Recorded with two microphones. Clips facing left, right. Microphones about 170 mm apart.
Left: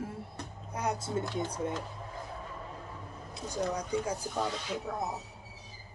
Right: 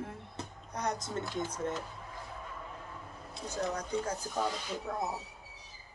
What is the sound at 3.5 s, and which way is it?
Speech, 10° left (ahead or behind).